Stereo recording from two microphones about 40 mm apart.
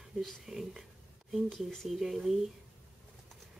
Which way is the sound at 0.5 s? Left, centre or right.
Centre.